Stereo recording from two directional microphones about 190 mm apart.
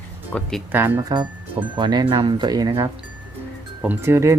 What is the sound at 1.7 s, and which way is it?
Speech, 25° right (ahead or behind).